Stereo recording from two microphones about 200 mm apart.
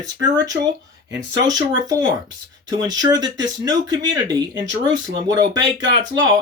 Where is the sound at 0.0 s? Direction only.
20° right (ahead or behind).